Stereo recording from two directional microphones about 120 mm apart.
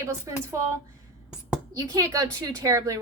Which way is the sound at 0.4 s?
25° right (ahead or behind).